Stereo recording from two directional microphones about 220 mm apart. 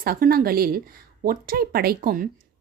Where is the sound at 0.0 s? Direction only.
40° right (ahead or behind).